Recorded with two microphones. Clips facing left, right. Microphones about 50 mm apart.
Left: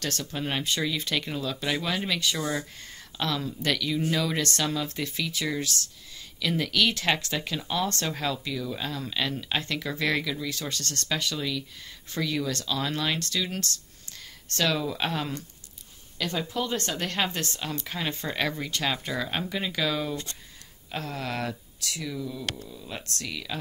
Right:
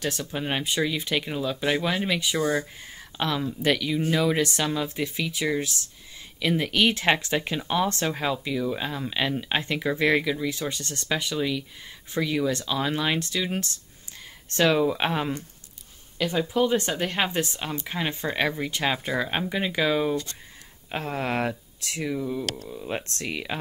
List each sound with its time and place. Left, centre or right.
0.0 s speech: centre
16.2 s speech: centre; by 23.6 s right